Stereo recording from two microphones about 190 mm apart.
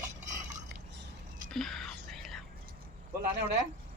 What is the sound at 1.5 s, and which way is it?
Whispering, centre (ahead or behind).